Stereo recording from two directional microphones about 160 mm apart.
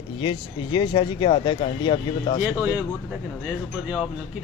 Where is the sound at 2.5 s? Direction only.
10° right (ahead or behind).